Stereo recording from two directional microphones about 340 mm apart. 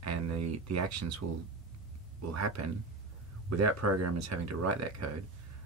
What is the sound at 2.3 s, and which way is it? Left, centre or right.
Speech, right.